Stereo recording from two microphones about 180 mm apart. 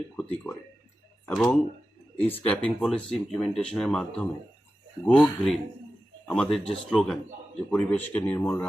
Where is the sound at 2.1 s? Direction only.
10° left (ahead or behind).